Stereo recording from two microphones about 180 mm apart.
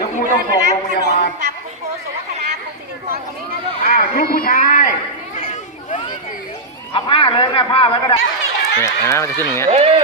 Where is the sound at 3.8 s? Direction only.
55° left (ahead or behind).